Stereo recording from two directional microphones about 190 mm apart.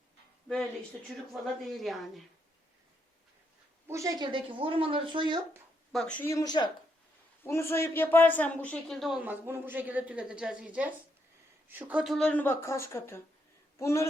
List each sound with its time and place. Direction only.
1.0 s a woman's voice: centre (ahead or behind)
3.8 s speech: 15° right (ahead or behind)
5.9 s a woman's voice: 5° left (ahead or behind)